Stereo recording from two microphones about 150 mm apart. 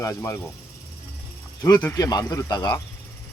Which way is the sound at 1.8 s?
20° left (ahead or behind).